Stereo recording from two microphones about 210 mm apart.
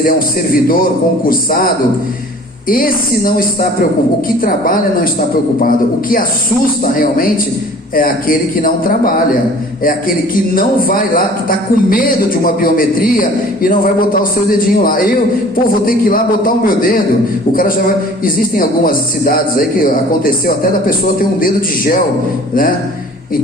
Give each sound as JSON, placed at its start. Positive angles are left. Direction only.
{"t": 0.5, "sound": "a woman's voice", "side_deg": 45}
{"t": 10.5, "sound": "speech", "side_deg": 40}